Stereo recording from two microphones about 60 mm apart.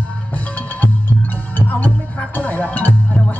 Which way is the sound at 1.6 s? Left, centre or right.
Left.